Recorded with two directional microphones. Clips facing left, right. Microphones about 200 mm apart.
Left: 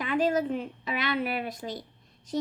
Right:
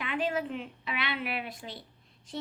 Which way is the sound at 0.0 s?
40° left (ahead or behind).